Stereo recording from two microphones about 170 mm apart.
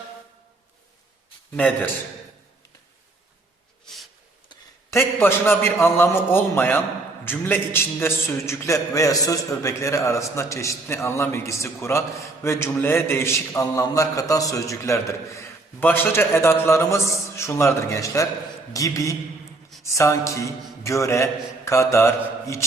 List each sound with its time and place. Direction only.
1.5 s a man's voice: 10° left (ahead or behind)
4.4 s a man's voice: 15° left (ahead or behind)